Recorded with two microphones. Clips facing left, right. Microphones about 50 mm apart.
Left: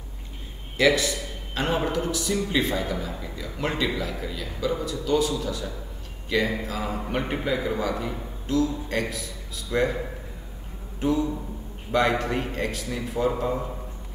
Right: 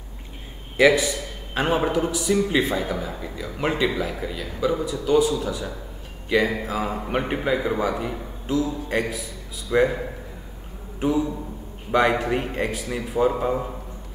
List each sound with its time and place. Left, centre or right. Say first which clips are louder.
0.7 s a man's voice: right 4 dB; centre
11.0 s a sound: right 2 dB; centre
11.9 s a man's voice: right 3 dB; centre